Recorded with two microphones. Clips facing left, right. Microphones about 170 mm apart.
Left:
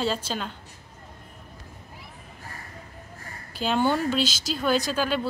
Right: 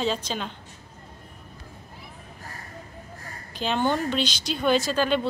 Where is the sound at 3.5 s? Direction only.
10° left (ahead or behind).